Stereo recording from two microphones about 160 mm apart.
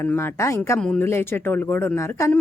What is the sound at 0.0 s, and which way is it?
A woman's voice, 15° left (ahead or behind).